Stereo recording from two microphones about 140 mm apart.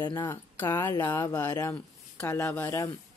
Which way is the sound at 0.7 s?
15° left (ahead or behind).